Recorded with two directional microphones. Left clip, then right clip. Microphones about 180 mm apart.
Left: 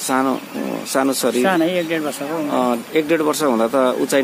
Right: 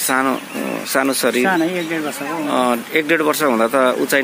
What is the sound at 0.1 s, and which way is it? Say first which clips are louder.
Speech: right 1 dB; centre (ahead or behind).